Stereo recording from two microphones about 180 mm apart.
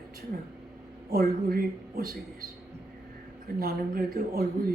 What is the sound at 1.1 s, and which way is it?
Speech, 55° right (ahead or behind).